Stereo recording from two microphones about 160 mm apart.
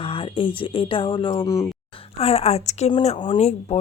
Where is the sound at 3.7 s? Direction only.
40° left (ahead or behind).